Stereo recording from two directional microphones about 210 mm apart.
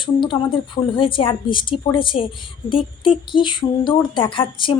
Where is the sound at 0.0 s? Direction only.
20° left (ahead or behind).